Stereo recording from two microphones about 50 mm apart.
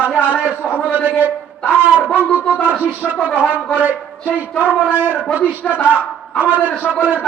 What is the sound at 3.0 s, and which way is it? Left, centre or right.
Speech, centre.